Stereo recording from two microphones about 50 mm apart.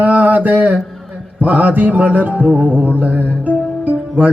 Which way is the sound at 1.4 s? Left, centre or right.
Right.